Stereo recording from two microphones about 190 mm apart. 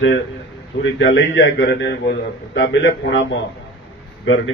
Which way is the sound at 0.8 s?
75° left (ahead or behind).